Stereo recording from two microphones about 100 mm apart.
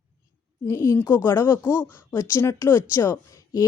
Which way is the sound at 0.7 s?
30° left (ahead or behind).